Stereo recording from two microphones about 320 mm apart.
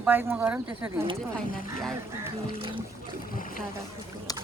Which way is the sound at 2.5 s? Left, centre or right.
Centre.